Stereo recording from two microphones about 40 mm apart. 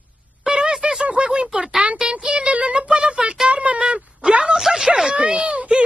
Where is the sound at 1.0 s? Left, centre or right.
Right.